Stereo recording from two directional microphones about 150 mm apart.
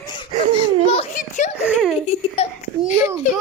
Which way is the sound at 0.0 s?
30° left (ahead or behind).